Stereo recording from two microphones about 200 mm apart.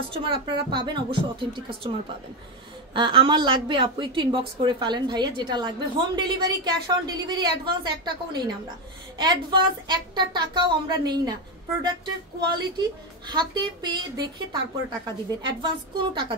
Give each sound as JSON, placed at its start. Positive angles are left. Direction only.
{"t": 0.1, "sound": "a woman's voice", "side_deg": -25}